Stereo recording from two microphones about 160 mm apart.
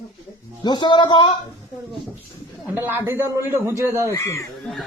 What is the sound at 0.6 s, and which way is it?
Speech, 30° left (ahead or behind).